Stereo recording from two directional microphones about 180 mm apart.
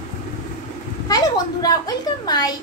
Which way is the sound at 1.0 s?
20° left (ahead or behind).